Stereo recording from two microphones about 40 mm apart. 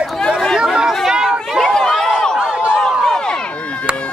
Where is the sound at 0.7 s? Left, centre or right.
Centre.